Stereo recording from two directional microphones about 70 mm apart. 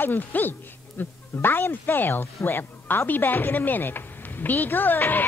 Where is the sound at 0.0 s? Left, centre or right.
Left.